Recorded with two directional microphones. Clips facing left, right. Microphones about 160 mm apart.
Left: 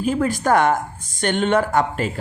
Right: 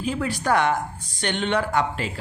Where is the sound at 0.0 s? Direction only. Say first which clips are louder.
Left 6 dB; 45° left (ahead or behind).